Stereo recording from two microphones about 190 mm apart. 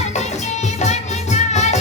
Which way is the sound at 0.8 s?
35° left (ahead or behind).